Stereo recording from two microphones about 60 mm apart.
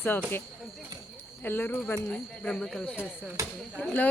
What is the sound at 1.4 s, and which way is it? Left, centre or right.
Speech, left.